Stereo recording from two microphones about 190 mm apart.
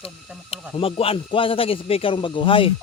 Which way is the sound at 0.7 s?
30° left (ahead or behind).